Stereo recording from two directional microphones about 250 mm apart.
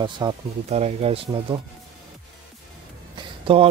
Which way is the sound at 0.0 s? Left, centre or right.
Centre.